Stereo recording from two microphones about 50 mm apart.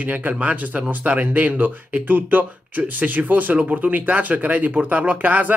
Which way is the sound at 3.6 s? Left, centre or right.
Right.